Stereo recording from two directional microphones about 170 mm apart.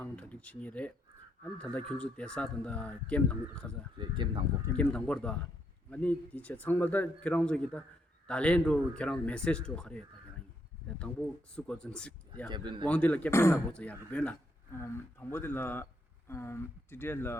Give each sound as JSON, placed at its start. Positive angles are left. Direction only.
{"t": 0.0, "sound": "a sound", "side_deg": 10}
{"t": 1.5, "sound": "speech", "side_deg": 5}
{"t": 3.9, "sound": "speech", "side_deg": -25}
{"t": 4.6, "sound": "speech", "side_deg": 5}
{"t": 12.5, "sound": "speech", "side_deg": -25}
{"t": 12.9, "sound": "speech", "side_deg": 10}